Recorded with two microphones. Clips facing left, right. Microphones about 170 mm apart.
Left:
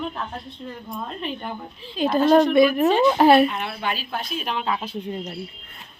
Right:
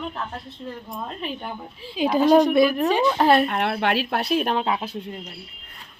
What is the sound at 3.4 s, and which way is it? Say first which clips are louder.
Speech: right 3 dB; 60° right (ahead or behind).